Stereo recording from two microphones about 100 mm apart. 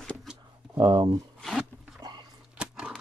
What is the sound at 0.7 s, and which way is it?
Speech, 50° right (ahead or behind).